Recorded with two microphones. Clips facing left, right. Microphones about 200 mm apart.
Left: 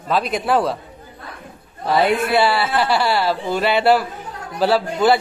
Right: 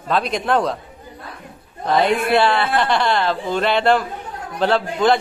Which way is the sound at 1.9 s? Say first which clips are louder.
Even; 5° left (ahead or behind).